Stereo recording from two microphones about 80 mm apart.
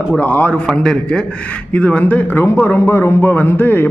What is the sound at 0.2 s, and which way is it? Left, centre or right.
A man's voice, centre.